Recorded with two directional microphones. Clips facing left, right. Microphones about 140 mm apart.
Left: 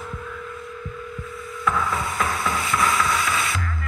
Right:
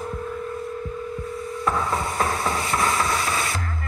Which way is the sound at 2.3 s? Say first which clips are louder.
Right 1 dB; 45° right (ahead or behind).